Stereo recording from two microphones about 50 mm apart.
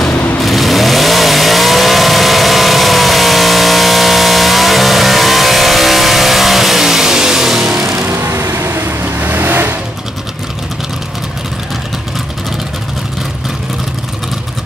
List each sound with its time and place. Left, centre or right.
0.4 s vehicle: centre
8.1 s vehicle: right
8.5 s vehicle: right
9.2 s vehicle: right